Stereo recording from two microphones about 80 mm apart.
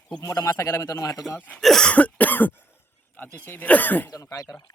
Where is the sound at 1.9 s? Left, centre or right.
Centre.